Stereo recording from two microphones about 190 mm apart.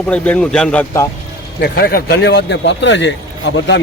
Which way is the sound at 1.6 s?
55° left (ahead or behind).